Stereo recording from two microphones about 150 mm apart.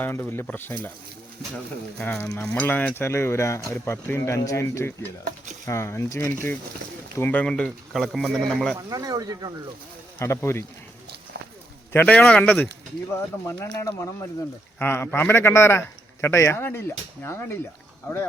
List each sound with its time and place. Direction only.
0.0 s a man's voice: 15° left (ahead or behind)
8.9 s speech: 25° right (ahead or behind)
10.2 s a man's voice: 20° left (ahead or behind)
11.3 s clip-clop: 90° right
11.9 s a man's voice: 10° left (ahead or behind)